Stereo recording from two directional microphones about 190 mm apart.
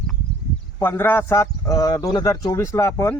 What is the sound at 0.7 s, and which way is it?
A man's voice, 15° left (ahead or behind).